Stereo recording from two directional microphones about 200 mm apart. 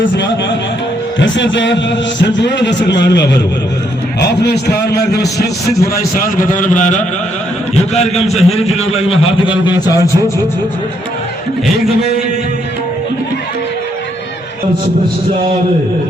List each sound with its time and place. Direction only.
1.2 s a man's voice: 65° left (ahead or behind); by 10.3 s 20° left (ahead or behind)